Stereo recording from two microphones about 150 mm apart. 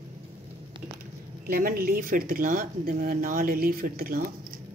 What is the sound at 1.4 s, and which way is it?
A woman's voice, 70° right (ahead or behind).